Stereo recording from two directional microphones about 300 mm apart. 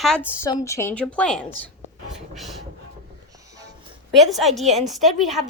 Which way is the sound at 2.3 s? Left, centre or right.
Centre.